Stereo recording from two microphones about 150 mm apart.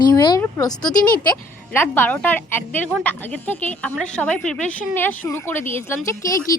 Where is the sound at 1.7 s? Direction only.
15° left (ahead or behind).